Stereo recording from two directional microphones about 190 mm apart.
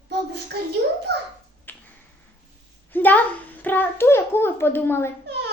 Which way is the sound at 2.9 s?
10° left (ahead or behind).